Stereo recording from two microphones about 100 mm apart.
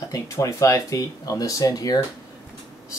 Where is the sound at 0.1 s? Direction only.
35° left (ahead or behind).